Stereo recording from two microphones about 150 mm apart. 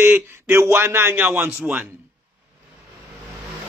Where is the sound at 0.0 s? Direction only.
15° right (ahead or behind).